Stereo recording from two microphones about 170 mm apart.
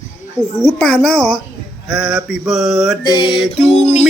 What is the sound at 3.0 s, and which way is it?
Speech, 25° left (ahead or behind).